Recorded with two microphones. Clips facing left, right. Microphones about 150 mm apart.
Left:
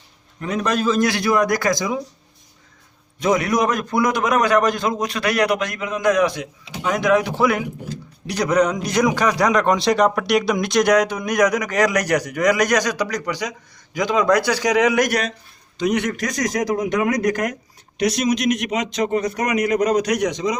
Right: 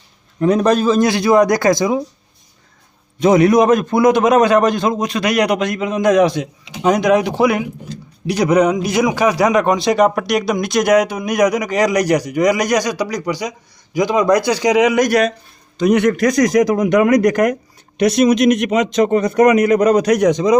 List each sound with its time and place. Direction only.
0.3 s a man's voice: 35° right (ahead or behind)
3.2 s a man's voice: 25° right (ahead or behind)
15.8 s a man's voice: 60° right (ahead or behind)
18.0 s speech: 55° right (ahead or behind)